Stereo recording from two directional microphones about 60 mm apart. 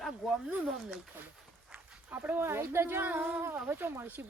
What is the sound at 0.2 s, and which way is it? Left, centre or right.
Speech, centre.